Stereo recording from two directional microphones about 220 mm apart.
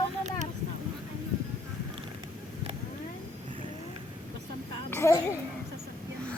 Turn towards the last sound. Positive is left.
turn(degrees=10)  # may be behind; listen again after turning